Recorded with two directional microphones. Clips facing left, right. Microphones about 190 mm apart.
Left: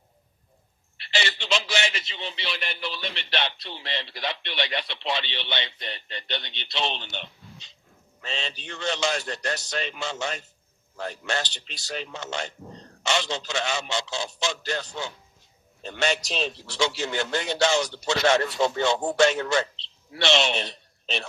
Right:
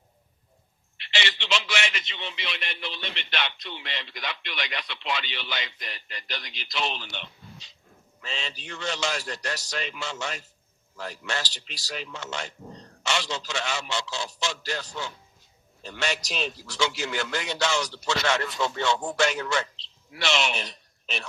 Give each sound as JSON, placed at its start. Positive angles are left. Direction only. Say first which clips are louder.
{"t": 0.9, "sound": "a man's voice", "louder": "left 2 dB", "side_deg": 35}